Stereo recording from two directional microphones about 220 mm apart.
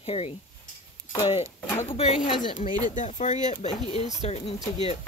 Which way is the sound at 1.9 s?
30° left (ahead or behind).